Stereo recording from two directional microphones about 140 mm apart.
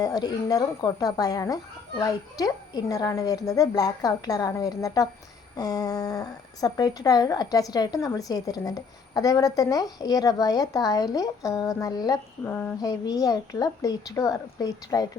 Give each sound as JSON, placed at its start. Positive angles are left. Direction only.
{"t": 0.0, "sound": "speech", "side_deg": 30}
{"t": 12.5, "sound": "a sound", "side_deg": 10}
{"t": 12.8, "sound": "speech", "side_deg": 30}